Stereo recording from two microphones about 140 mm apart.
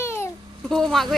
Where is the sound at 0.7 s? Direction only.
Centre (ahead or behind).